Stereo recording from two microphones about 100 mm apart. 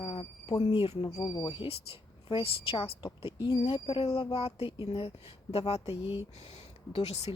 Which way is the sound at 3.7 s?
70° left (ahead or behind).